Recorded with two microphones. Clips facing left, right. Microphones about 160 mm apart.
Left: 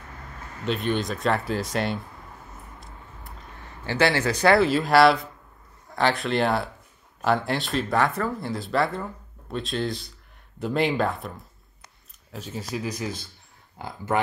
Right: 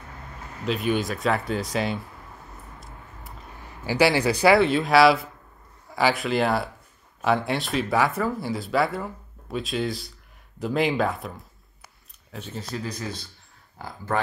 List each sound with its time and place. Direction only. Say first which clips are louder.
0.7 s speech: right 1 dB; centre (ahead or behind)
3.8 s speech: right 2 dB; 10° right (ahead or behind); by 12.9 s 10° left (ahead or behind)
13.7 s speech: left 2 dB; 20° left (ahead or behind)